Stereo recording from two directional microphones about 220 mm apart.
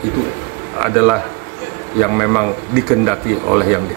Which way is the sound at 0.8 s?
Centre (ahead or behind).